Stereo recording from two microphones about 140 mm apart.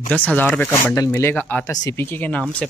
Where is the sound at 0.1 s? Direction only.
10° left (ahead or behind).